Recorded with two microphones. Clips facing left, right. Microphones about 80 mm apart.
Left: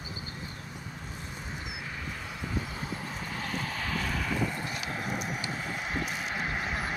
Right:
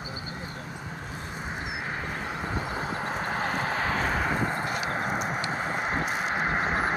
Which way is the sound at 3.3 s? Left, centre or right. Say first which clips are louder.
Right 5 dB; right.